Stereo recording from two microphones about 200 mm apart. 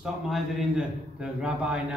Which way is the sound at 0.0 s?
Centre (ahead or behind).